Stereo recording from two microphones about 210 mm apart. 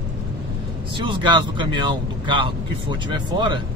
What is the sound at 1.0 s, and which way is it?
Speech, 20° right (ahead or behind).